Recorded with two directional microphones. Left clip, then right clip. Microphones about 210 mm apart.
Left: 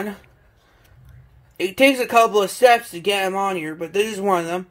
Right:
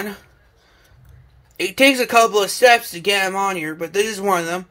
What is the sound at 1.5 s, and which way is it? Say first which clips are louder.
Speech: right 1 dB; 5° right (ahead or behind).